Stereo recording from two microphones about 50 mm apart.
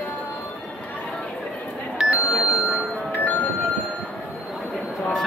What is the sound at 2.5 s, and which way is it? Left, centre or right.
Bell, centre.